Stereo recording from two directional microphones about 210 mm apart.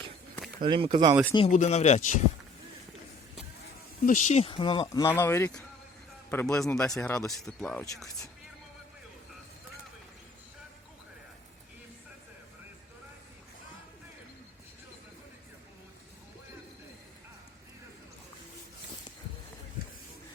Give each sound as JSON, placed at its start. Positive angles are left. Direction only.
{"t": 0.6, "sound": "speech", "side_deg": -25}
{"t": 1.5, "sound": "speech", "side_deg": 35}
{"t": 4.0, "sound": "speech", "side_deg": 35}